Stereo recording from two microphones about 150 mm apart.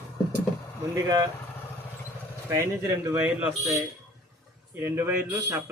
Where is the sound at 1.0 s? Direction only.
25° right (ahead or behind).